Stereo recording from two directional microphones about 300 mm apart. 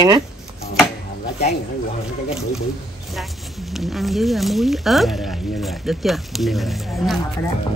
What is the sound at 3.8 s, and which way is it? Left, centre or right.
Speech, centre.